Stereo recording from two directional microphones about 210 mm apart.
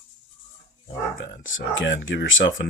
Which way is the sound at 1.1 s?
65° left (ahead or behind).